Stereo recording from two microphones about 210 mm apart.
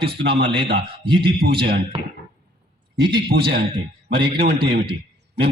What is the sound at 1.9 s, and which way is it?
Speech, 25° right (ahead or behind).